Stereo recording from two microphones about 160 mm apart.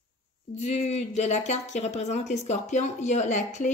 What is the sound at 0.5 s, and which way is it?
Speech, 45° left (ahead or behind).